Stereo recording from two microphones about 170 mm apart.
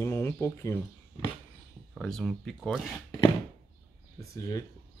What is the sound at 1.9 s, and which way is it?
Speech, centre (ahead or behind).